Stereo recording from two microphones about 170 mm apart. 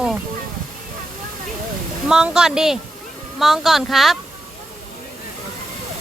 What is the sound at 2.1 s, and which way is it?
Speech, 5° right (ahead or behind).